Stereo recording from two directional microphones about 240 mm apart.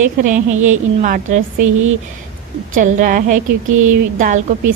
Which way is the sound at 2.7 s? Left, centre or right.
Right.